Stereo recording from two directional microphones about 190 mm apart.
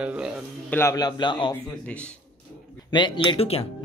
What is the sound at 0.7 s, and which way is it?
Speech, 15° left (ahead or behind).